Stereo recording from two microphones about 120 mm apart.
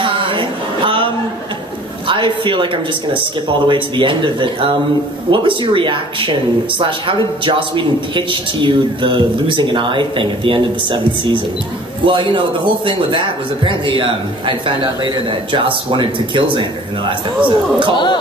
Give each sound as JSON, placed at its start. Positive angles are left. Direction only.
{"t": 0.0, "sound": "a sound", "side_deg": -45}
{"t": 2.0, "sound": "speech", "side_deg": -45}
{"t": 17.9, "sound": "speech", "side_deg": 40}